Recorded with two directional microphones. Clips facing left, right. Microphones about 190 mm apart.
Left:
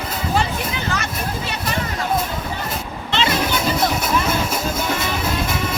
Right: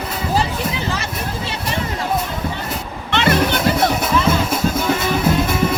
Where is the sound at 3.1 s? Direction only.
60° right (ahead or behind).